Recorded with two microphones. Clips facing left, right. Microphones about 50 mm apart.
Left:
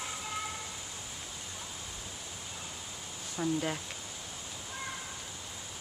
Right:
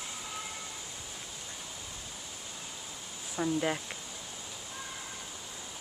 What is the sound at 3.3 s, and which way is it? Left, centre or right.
Speech, centre.